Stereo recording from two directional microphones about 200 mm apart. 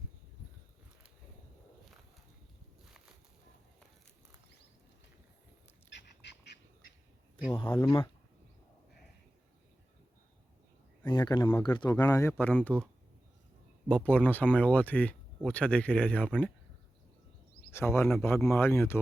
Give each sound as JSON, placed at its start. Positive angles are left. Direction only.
{"t": 5.9, "sound": "duck", "side_deg": 60}
{"t": 7.5, "sound": "speech", "side_deg": 25}
{"t": 11.0, "sound": "speech", "side_deg": 20}
{"t": 17.7, "sound": "speech", "side_deg": 15}